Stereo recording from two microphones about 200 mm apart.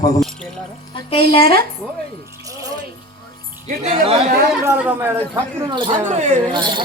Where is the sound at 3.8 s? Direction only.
30° right (ahead or behind).